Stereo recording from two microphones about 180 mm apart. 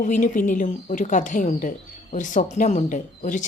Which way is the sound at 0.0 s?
45° left (ahead or behind).